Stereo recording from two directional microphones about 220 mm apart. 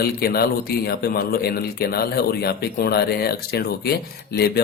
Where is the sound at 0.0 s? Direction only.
45° left (ahead or behind).